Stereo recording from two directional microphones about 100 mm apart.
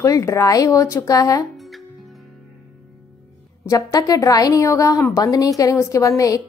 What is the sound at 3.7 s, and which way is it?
Speech, 40° left (ahead or behind).